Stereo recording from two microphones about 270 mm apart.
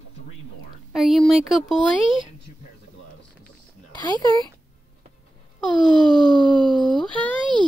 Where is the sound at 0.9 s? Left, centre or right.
Centre.